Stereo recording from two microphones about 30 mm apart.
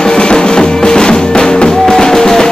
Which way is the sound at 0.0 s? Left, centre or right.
Left.